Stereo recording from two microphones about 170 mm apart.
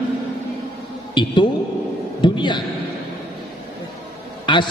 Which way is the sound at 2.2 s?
25° left (ahead or behind).